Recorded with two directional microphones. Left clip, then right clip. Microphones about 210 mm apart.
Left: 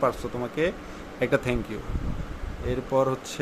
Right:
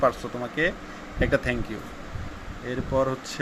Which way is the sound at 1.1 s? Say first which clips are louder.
Even; 20° left (ahead or behind).